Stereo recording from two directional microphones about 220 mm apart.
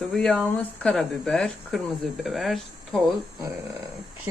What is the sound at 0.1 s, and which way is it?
Speech, centre (ahead or behind).